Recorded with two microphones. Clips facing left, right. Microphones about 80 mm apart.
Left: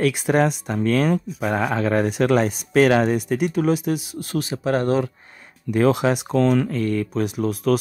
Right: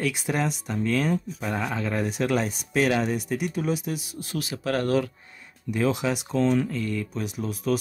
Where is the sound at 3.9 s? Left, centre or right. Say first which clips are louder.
Left 8 dB; left.